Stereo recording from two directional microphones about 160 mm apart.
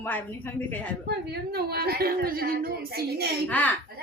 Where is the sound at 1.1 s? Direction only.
75° right (ahead or behind).